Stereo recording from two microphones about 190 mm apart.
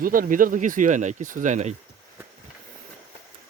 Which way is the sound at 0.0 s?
45° right (ahead or behind).